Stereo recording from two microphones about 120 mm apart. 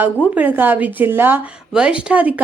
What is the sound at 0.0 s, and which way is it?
A woman's voice, 15° right (ahead or behind).